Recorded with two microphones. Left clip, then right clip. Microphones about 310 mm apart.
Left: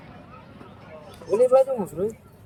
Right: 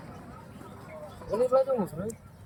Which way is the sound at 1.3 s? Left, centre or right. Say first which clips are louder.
Left 7 dB; left.